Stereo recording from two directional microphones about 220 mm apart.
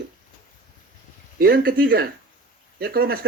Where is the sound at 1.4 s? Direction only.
45° right (ahead or behind).